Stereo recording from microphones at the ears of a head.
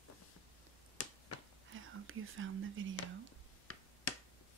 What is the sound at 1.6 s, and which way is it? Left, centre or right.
Speech, right.